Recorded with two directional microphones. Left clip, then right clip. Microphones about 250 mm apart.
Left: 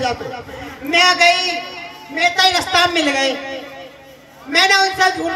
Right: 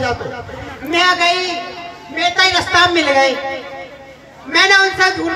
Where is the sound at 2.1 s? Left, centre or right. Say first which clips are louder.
Right 1 dB; left.